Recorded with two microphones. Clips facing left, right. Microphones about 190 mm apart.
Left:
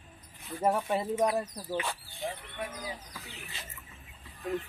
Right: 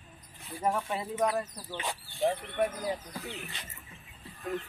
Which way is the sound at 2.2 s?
50° right (ahead or behind).